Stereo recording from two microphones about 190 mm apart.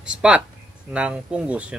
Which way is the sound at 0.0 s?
5° right (ahead or behind).